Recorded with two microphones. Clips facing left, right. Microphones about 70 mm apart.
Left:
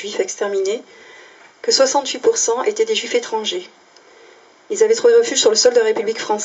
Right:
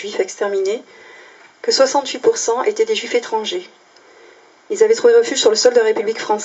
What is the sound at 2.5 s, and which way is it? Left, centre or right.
Speech, right.